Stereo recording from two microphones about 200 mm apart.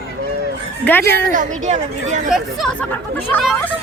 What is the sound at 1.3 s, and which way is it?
Speech, 40° right (ahead or behind).